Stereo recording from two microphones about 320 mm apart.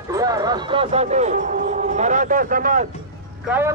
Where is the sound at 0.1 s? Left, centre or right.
Centre.